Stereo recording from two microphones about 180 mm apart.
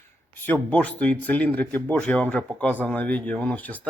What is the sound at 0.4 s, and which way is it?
Speech, 10° left (ahead or behind).